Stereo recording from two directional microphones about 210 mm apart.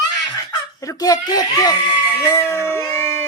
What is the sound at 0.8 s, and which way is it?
Speech, 15° left (ahead or behind).